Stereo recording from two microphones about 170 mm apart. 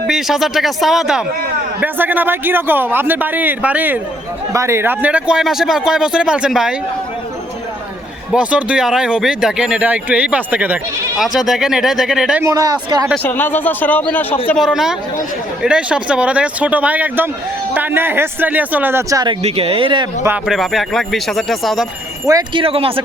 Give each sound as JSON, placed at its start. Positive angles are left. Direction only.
{"t": 0.1, "sound": "speech", "side_deg": 0}
{"t": 8.3, "sound": "speech", "side_deg": -5}
{"t": 12.4, "sound": "speech", "side_deg": -20}
{"t": 13.2, "sound": "a man's voice", "side_deg": 10}
{"t": 14.6, "sound": "speech", "side_deg": -5}
{"t": 19.4, "sound": "speech", "side_deg": -35}
{"t": 20.2, "sound": "speech", "side_deg": -5}
{"t": 22.3, "sound": "speech", "side_deg": -20}
{"t": 22.6, "sound": "speech", "side_deg": -35}